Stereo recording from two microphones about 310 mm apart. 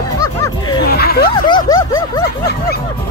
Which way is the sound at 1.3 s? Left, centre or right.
Centre.